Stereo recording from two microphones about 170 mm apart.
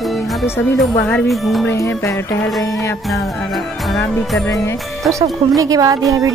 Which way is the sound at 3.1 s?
Centre (ahead or behind).